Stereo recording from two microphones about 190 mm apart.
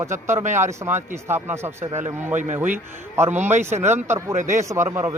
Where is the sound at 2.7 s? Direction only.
10° right (ahead or behind).